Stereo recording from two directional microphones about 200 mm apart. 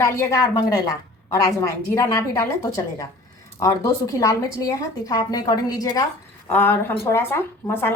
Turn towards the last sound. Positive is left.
turn(degrees=10)  # may be behind; listen again after turning